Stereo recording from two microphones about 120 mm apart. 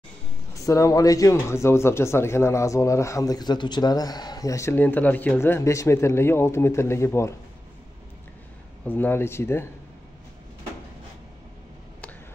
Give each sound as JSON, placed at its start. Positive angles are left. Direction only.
{"t": 0.7, "sound": "speech", "side_deg": 25}
{"t": 8.8, "sound": "speech", "side_deg": 15}